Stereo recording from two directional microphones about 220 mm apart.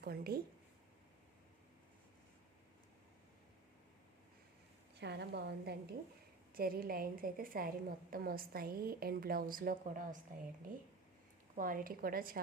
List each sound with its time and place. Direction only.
0.0 s a woman's voice: 45° right (ahead or behind)
4.9 s a woman's voice: 50° right (ahead or behind)
11.5 s a woman's voice: 40° right (ahead or behind)